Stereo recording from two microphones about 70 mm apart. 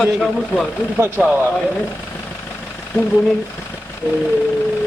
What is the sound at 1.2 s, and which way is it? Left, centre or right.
Speech, centre.